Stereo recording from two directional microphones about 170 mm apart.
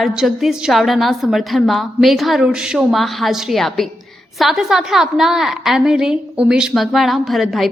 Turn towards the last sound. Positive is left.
turn(degrees=0)  # may be behind; listen again after turning